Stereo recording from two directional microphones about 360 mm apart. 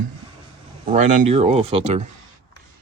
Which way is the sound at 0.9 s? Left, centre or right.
Centre.